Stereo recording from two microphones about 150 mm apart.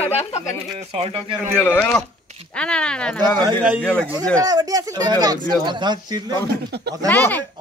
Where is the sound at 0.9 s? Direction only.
40° right (ahead or behind).